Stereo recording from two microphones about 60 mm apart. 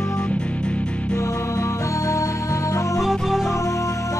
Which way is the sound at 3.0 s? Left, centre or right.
Centre.